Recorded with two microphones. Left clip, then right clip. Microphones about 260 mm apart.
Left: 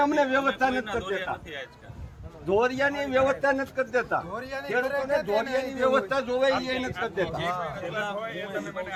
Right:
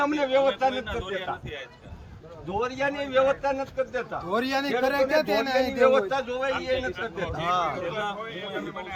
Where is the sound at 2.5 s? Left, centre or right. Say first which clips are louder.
Left 2 dB; centre.